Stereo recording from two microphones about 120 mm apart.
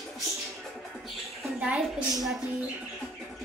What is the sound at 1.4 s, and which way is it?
Speech, 5° right (ahead or behind).